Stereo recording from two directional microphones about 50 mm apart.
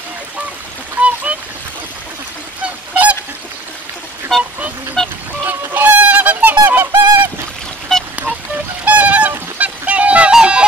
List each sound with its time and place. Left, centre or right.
1.0 s splash: right
2.6 s goose: right
4.3 s vehicle: centre
5.0 s a sound: centre
5.5 s fowl: right
6.7 s goose: right
7.9 s a sound: centre
8.8 s goose: right
9.6 s a sound: right
10.3 s music: right